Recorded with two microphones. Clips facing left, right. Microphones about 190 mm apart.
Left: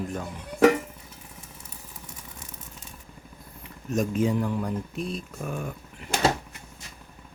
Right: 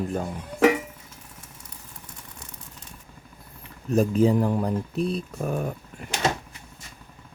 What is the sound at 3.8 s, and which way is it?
Speech, 35° right (ahead or behind).